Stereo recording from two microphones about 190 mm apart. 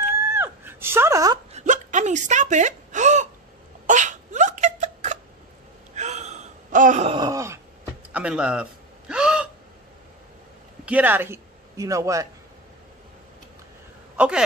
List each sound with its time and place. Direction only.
0.3 s a sound: 10° right (ahead or behind)
1.5 s gasp: 40° right (ahead or behind)
3.8 s a sound: 40° right (ahead or behind)
5.9 s gasp: 35° right (ahead or behind); by 9.5 s 5° right (ahead or behind)
10.9 s a man's voice: 10° right (ahead or behind)
14.1 s speech: 5° right (ahead or behind)